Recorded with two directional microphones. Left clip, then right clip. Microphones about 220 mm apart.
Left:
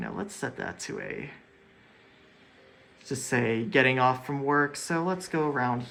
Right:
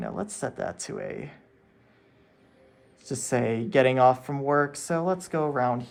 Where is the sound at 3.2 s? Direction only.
40° right (ahead or behind).